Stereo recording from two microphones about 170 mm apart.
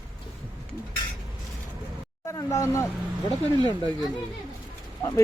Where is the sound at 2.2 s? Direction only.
20° left (ahead or behind).